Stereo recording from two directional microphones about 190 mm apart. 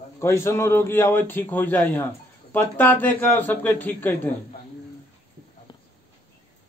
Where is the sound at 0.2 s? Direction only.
15° left (ahead or behind).